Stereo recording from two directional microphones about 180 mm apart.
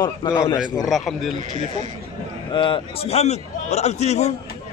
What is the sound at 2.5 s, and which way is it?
A man's voice, 25° left (ahead or behind).